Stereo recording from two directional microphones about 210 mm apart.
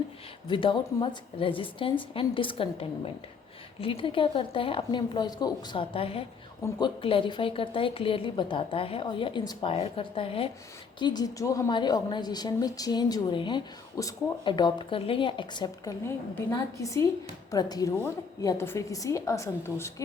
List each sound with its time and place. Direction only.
0.4 s a woman's voice: 25° left (ahead or behind)